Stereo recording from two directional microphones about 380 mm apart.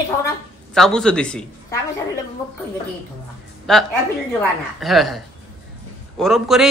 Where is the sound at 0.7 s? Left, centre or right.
Centre.